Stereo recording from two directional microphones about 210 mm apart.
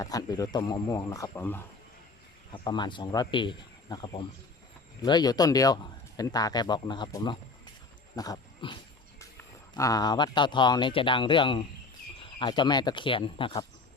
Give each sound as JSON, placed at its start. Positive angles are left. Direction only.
{"t": 0.0, "sound": "a man's voice", "side_deg": 15}
{"t": 2.5, "sound": "speech", "side_deg": 20}
{"t": 8.1, "sound": "a sound", "side_deg": 20}
{"t": 9.7, "sound": "speech", "side_deg": 15}